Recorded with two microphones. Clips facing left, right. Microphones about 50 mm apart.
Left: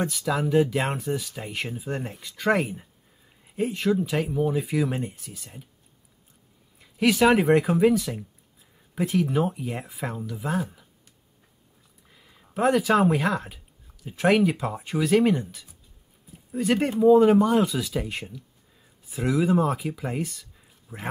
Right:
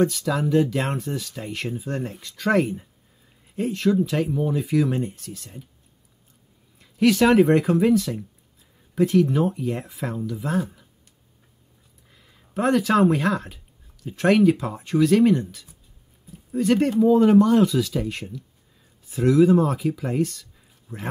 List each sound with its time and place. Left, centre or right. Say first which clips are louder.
0.0 s speech: right 4 dB; centre
6.8 s speech: right 2 dB; centre
12.1 s speech: right 2 dB; centre